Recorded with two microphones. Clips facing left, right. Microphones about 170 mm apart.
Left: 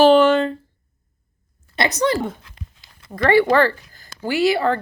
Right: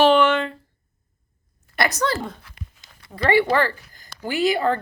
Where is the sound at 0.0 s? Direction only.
35° left (ahead or behind).